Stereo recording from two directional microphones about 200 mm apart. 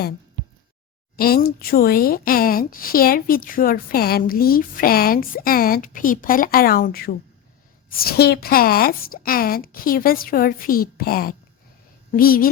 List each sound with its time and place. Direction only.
1.1 s speech: 50° left (ahead or behind)